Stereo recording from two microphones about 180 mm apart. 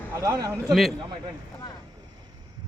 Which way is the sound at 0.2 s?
20° right (ahead or behind).